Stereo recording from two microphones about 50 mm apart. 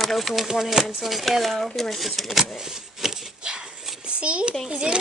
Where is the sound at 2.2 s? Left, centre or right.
Centre; by 4.5 s right.